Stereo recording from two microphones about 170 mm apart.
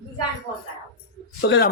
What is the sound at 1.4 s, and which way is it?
Speech, 80° left.